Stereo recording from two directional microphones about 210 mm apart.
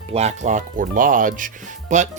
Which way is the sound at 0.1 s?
30° right (ahead or behind).